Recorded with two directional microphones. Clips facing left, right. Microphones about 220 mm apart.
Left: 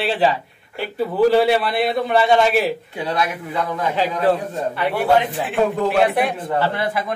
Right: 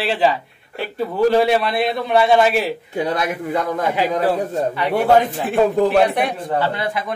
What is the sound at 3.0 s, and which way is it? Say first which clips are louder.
Speech: right 2 dB; 45° right (ahead or behind).